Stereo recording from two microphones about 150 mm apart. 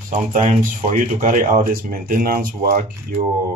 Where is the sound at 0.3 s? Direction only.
60° right (ahead or behind); by 2.8 s 85° right.